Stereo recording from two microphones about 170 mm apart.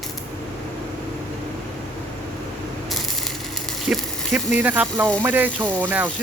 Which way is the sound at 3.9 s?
Centre (ahead or behind).